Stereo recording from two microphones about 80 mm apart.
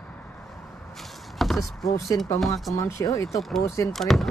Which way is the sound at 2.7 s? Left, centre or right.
Left.